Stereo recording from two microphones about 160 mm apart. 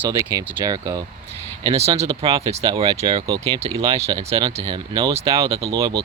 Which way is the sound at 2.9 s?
40° right (ahead or behind).